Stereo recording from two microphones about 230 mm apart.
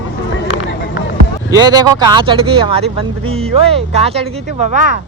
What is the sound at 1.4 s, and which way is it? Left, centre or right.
Speech, centre.